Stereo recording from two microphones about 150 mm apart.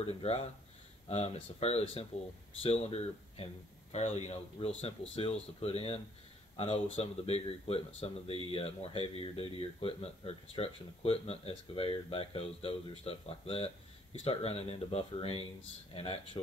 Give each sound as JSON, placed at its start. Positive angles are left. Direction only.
{"t": 0.2, "sound": "speech", "side_deg": 50}